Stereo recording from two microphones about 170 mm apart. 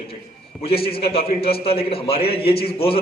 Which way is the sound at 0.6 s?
35° left (ahead or behind).